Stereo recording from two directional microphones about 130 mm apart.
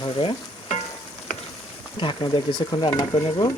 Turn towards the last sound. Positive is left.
turn(degrees=30)  # may be behind; listen again after turning